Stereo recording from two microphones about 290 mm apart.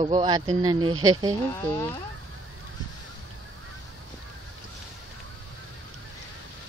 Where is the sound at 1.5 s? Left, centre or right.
Centre.